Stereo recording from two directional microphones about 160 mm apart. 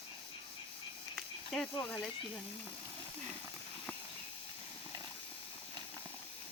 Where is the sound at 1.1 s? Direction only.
5° left (ahead or behind).